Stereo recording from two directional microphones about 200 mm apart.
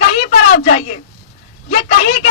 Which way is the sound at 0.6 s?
35° left (ahead or behind).